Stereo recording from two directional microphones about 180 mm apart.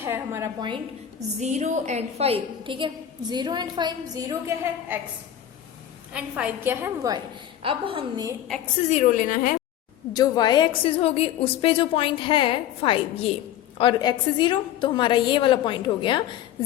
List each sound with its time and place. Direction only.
0.0 s a woman's voice: 15° right (ahead or behind)
1.4 s a woman's voice: 40° right (ahead or behind); by 4.9 s 15° right (ahead or behind)
6.1 s a woman's voice: 5° right (ahead or behind)
7.6 s a woman's voice: 30° right (ahead or behind)
8.9 s a woman's voice: 45° left (ahead or behind)
10.1 s a woman's voice: 20° left (ahead or behind)